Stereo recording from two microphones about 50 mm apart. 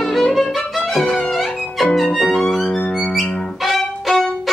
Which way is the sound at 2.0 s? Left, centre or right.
Centre.